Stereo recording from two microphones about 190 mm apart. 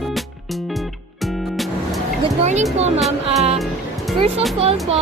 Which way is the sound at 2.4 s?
35° right (ahead or behind).